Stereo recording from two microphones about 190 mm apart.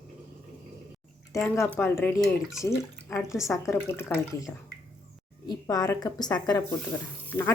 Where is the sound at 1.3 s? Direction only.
15° left (ahead or behind).